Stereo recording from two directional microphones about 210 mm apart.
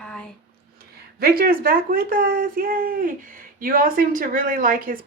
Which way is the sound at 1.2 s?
45° right (ahead or behind).